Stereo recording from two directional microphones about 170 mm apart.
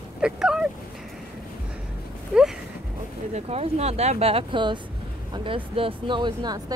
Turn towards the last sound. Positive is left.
turn(degrees=-25)  # may be behind; listen again after turning